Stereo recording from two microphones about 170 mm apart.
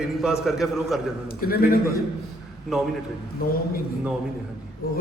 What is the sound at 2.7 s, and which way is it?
Speech, centre (ahead or behind).